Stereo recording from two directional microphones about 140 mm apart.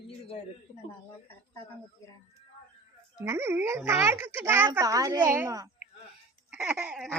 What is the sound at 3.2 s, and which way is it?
Speech, 20° right (ahead or behind).